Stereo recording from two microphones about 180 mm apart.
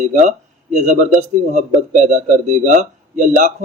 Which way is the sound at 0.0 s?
40° right (ahead or behind).